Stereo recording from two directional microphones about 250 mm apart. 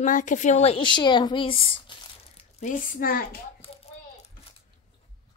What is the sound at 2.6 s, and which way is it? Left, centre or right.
Speech, left.